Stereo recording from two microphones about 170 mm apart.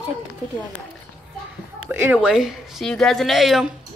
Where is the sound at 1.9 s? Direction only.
10° right (ahead or behind).